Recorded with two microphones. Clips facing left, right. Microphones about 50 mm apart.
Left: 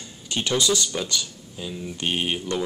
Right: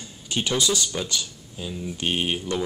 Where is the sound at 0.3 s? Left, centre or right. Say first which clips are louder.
Left 1 dB; centre.